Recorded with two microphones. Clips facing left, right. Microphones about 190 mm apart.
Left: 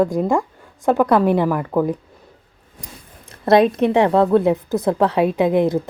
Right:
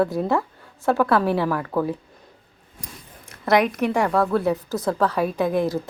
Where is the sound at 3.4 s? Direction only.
25° left (ahead or behind).